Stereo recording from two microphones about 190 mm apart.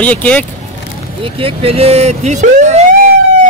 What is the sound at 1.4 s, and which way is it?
Speech, 30° right (ahead or behind).